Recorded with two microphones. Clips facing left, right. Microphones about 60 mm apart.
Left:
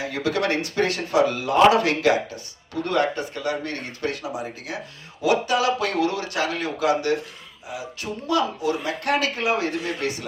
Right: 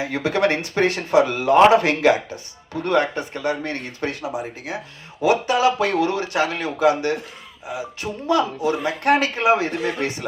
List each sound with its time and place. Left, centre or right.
0.0 s speech: right